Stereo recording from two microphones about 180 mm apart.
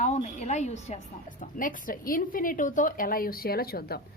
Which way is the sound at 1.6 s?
50° left (ahead or behind).